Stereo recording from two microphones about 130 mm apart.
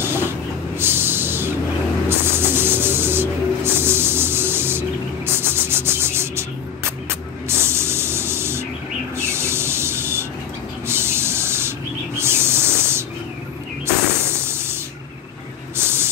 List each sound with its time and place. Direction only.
0.0 s a sound: 15° right (ahead or behind)
0.7 s music: 15° right (ahead or behind)
2.0 s snake: 15° right (ahead or behind)
7.1 s spray: 20° right (ahead or behind)
9.1 s rub: 20° right (ahead or behind)
10.9 s spray: 20° right (ahead or behind)
12.2 s hiss: 20° right (ahead or behind)
14.2 s a sound: 20° right (ahead or behind)
15.7 s spray: 20° right (ahead or behind)